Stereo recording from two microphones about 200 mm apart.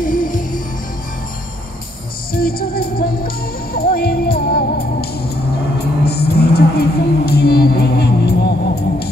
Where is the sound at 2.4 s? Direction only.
50° left (ahead or behind).